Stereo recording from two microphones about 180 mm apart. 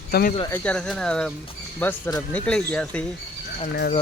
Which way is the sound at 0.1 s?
55° left (ahead or behind).